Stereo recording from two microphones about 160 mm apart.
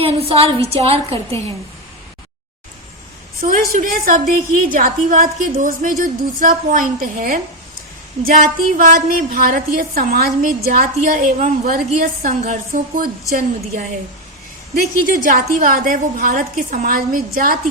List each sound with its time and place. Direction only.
0.0 s a woman's voice: 35° right (ahead or behind)
3.7 s a woman's voice: 55° right (ahead or behind)
14.8 s a woman's voice: 65° right (ahead or behind)